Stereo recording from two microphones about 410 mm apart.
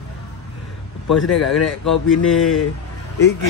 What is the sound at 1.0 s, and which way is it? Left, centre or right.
Speech, left.